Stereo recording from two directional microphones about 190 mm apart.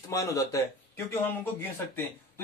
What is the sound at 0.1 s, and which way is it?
Speech, 15° left (ahead or behind).